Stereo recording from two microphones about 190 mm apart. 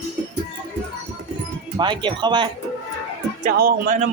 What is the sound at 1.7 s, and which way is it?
Speech, 25° right (ahead or behind).